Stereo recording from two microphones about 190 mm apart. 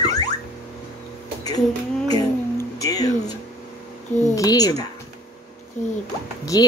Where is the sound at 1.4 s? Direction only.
20° left (ahead or behind).